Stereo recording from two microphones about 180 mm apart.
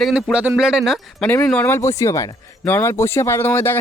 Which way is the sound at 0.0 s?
5° right (ahead or behind).